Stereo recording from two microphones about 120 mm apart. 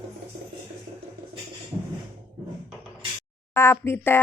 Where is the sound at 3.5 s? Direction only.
20° left (ahead or behind).